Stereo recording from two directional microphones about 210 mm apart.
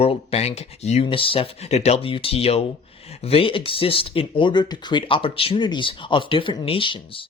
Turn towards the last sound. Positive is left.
turn(degrees=25)  # may be behind; listen again after turning